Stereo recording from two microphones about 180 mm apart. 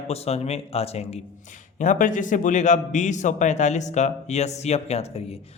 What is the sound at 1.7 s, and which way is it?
A man's voice, 45° left (ahead or behind).